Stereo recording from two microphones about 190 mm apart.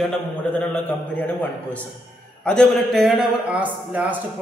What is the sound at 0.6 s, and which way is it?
A man's voice, 10° left (ahead or behind).